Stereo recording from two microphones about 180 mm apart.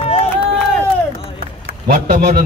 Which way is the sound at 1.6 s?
60° right (ahead or behind).